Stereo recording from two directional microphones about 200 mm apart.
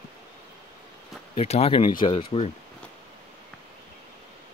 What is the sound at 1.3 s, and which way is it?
Speech, 30° left (ahead or behind).